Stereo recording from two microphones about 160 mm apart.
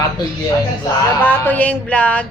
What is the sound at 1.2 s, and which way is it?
Speech, 10° left (ahead or behind).